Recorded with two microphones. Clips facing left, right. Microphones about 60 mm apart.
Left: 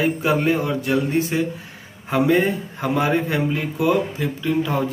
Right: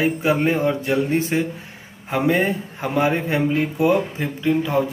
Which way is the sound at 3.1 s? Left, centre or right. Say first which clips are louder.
Even; right.